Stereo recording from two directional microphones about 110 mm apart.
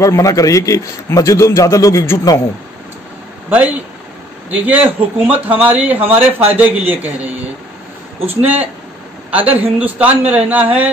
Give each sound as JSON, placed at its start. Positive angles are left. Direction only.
{"t": 0.0, "sound": "a man's voice", "side_deg": 30}
{"t": 3.4, "sound": "a man's voice", "side_deg": -15}